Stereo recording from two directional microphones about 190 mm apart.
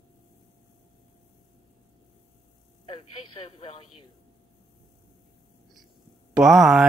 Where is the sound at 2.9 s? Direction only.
30° left (ahead or behind).